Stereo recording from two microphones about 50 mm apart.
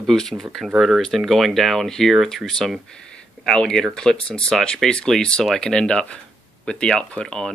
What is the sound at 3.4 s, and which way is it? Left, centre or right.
Speech, centre.